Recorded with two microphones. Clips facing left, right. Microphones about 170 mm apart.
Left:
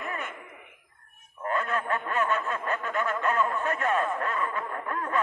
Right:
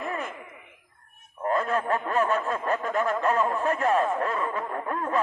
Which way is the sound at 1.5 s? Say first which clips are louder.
Right 4 dB; 35° right (ahead or behind).